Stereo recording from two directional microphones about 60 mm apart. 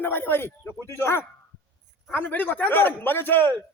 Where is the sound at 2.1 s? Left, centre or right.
Left.